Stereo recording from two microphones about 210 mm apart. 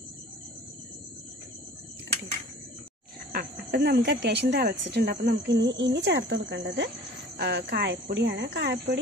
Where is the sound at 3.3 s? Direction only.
45° right (ahead or behind).